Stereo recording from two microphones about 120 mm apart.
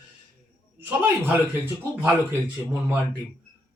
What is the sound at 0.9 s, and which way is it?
Speech, 15° right (ahead or behind).